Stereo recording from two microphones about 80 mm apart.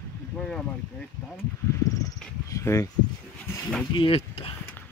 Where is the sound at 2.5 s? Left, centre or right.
Left.